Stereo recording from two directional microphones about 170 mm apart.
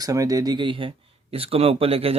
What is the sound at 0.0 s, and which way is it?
Speech, 20° right (ahead or behind).